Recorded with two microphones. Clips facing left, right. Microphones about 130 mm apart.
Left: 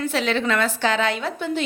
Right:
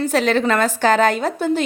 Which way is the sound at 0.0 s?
45° right (ahead or behind).